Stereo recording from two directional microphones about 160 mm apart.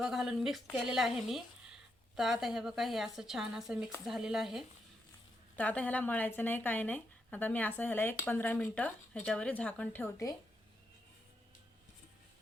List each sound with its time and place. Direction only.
0.0 s a woman's voice: centre (ahead or behind)
5.5 s speech: 10° left (ahead or behind)